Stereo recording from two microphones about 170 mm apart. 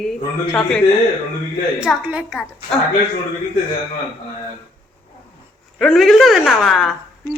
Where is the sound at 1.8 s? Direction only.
5° right (ahead or behind).